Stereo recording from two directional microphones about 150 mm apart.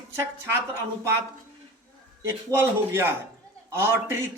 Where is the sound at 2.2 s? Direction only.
15° right (ahead or behind).